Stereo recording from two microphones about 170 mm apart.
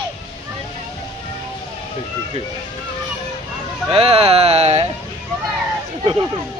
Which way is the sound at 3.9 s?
35° right (ahead or behind).